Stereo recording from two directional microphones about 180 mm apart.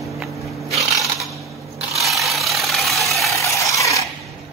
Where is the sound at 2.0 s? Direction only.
Centre (ahead or behind).